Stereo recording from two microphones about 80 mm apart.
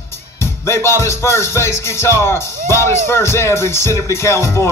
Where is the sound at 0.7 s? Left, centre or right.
Left.